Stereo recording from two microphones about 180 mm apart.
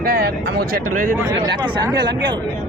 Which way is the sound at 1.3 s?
25° right (ahead or behind).